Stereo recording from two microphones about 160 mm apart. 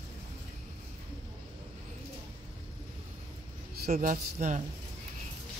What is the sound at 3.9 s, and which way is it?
Speech, 55° right (ahead or behind).